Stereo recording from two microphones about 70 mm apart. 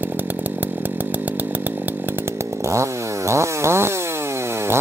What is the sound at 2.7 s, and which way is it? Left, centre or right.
Chainsaw, right.